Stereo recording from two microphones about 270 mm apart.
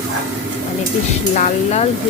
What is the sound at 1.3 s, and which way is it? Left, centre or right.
Speech, left.